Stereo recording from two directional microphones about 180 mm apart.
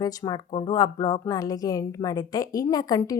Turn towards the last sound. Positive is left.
turn(degrees=20)  # may be behind; listen again after turning